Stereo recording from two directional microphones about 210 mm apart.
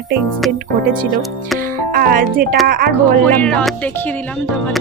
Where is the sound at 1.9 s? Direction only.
45° right (ahead or behind).